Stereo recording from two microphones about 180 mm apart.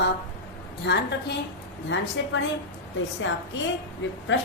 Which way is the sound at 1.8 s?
90° left.